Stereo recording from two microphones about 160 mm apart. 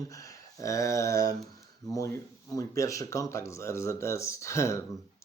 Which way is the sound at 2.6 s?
20° left (ahead or behind).